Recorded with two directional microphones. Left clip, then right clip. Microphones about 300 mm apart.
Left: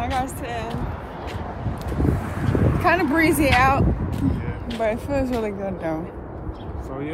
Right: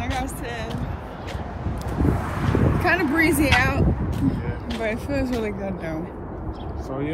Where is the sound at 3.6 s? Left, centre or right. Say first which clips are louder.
Left 4 dB; centre.